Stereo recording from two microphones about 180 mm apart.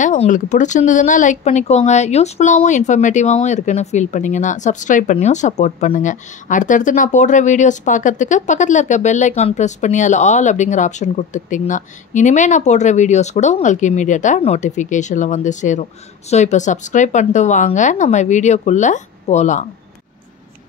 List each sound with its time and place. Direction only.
0.0 s speech: 45° left (ahead or behind)